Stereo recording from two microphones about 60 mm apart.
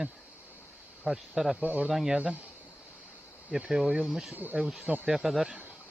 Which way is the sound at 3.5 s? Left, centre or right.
Centre.